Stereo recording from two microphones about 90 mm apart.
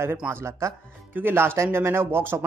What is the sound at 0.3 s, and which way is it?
Speech, 30° right (ahead or behind).